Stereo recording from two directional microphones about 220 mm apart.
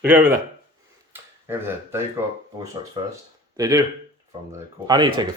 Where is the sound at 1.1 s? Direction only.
10° right (ahead or behind).